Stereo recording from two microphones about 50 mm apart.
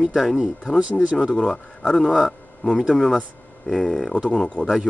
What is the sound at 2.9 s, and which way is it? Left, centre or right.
Speech, centre.